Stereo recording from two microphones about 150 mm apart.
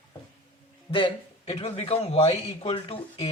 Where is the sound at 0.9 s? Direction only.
40° left (ahead or behind).